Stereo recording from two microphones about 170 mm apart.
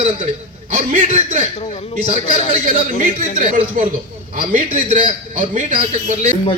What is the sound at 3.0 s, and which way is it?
Speech, 45° right (ahead or behind).